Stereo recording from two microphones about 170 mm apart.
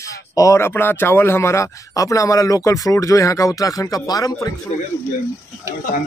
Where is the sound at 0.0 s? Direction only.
20° left (ahead or behind).